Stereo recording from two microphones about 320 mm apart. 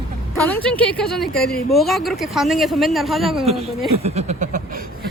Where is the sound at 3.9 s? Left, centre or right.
Centre.